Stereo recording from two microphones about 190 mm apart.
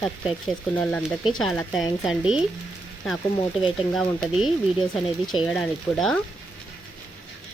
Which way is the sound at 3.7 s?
Centre (ahead or behind).